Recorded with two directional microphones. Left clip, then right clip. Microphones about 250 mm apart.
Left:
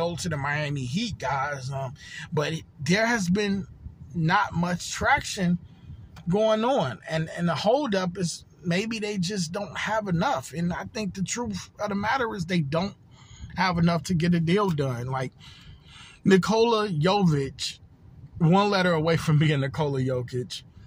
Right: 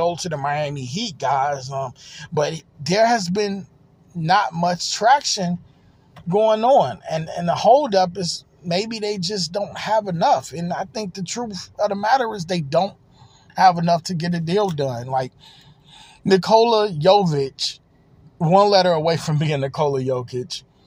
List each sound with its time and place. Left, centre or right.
0.0 s speech: centre
15.4 s a sound: right
16.3 s speech: centre